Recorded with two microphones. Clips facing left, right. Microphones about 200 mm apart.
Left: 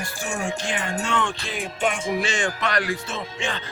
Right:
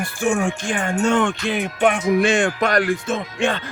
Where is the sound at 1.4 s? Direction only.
60° right (ahead or behind).